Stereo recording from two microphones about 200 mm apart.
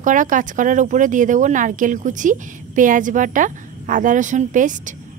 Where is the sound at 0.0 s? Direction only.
40° right (ahead or behind).